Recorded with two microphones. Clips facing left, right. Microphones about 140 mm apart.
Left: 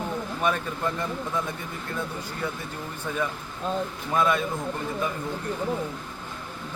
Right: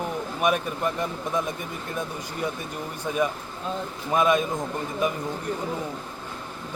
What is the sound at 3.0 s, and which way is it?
A man's voice, 15° right (ahead or behind).